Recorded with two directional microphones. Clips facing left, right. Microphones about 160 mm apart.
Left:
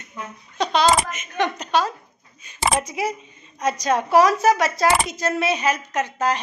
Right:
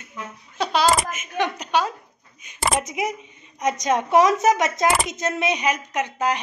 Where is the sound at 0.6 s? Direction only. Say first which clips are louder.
Left 1 dB; 5° right (ahead or behind).